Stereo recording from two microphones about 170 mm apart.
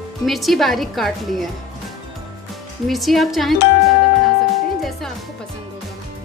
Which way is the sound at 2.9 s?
Centre (ahead or behind).